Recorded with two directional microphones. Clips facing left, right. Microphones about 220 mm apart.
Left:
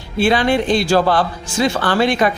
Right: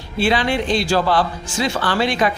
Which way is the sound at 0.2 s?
50° left (ahead or behind).